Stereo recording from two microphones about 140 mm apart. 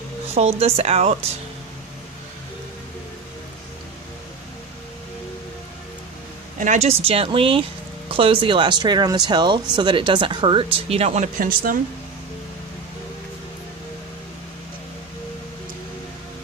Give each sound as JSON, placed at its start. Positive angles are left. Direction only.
{"t": 0.3, "sound": "speech", "side_deg": -45}
{"t": 6.6, "sound": "speech", "side_deg": -55}
{"t": 11.3, "sound": "a woman's voice", "side_deg": -80}